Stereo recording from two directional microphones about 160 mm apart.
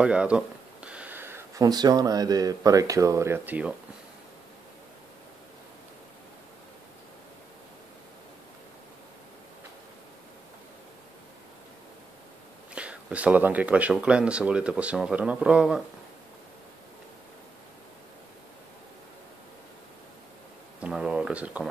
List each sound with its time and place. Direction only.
0.0 s speech: 5° right (ahead or behind)
12.7 s speech: 10° right (ahead or behind)
20.8 s a sound: 5° right (ahead or behind)